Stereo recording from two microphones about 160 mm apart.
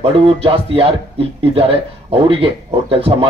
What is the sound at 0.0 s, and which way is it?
Speech, 35° right (ahead or behind).